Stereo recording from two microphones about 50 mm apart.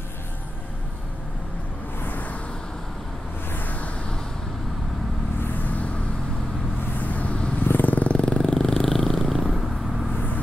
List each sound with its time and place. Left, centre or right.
2.0 s a sound: left
3.5 s music: left
5.4 s vehicle: left
7.0 s vehicle: left; by 9.7 s centre